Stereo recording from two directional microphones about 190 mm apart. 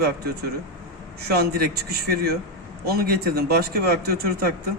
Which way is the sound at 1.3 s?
55° right (ahead or behind).